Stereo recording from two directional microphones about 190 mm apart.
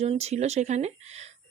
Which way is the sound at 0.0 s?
35° right (ahead or behind).